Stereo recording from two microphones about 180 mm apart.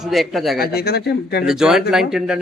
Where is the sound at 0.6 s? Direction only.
60° left (ahead or behind).